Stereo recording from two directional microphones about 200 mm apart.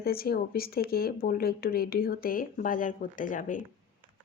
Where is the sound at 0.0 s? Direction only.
50° left (ahead or behind).